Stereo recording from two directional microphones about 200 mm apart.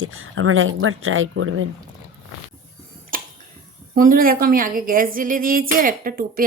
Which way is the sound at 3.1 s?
45° right (ahead or behind).